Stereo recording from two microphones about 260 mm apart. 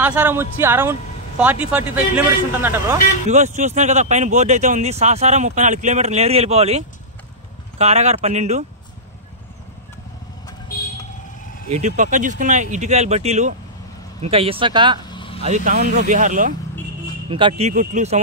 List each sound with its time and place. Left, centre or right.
0.0 s a man's voice: centre
3.3 s speech: right
7.8 s speech: right
11.7 s speech: right
15.0 s vehicle: centre
15.4 s speech: right
17.3 s speech: centre